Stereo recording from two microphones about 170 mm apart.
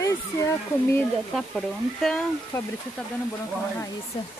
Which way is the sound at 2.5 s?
15° left (ahead or behind).